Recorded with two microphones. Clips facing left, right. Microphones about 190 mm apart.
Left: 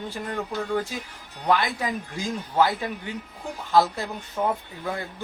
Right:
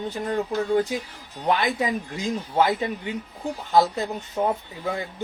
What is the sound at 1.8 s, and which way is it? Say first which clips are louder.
Speech: right 3 dB; 20° right (ahead or behind).